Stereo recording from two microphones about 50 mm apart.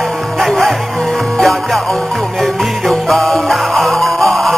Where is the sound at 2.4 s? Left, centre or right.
Centre.